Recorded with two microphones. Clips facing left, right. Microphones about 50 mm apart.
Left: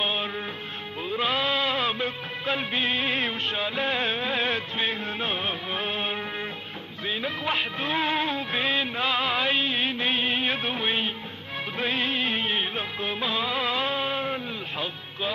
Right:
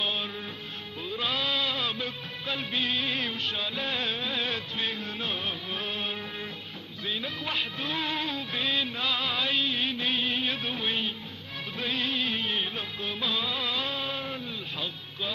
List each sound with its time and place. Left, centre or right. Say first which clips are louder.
0.0 s music: left 4 dB; left
11.8 s music of bollywood: left 3 dB; left